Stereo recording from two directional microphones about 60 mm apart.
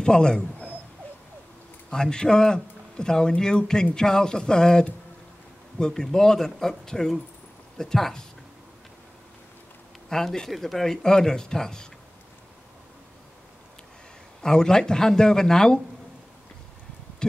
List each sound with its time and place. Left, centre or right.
0.0 s speech: centre
1.9 s speech: centre
10.0 s speech: centre
14.4 s speech: centre